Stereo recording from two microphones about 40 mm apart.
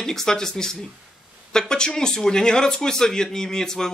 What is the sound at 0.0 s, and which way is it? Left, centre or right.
Speech, centre.